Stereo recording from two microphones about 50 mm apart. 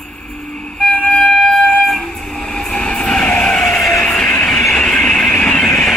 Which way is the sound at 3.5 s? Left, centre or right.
Centre.